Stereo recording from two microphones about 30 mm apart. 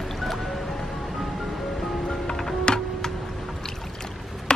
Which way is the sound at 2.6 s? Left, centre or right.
Left.